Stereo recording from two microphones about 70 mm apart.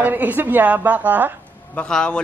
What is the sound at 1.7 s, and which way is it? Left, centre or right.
Speech, centre.